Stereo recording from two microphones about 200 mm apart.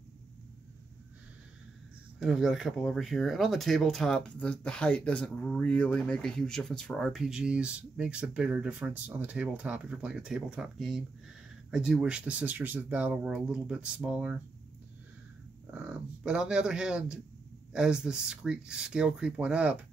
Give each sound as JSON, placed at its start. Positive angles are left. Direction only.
{"t": 2.1, "sound": "speech", "side_deg": 0}
{"t": 15.7, "sound": "speech", "side_deg": -5}